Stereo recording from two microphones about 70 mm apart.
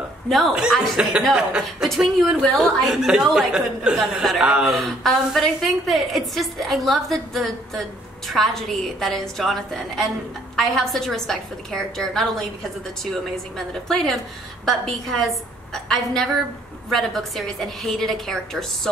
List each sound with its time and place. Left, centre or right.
0.3 s a woman's voice: centre
4.7 s a woman's voice: centre